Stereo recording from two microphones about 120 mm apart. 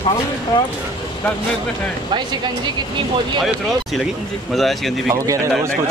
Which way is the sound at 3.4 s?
Centre (ahead or behind).